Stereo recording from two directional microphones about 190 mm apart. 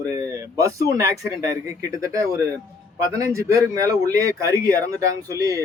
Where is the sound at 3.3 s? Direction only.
15° right (ahead or behind).